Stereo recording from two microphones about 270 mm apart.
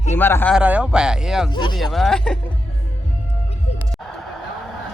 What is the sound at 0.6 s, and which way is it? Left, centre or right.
Speech, centre.